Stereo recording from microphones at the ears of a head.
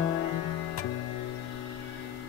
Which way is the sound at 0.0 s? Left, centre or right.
Left.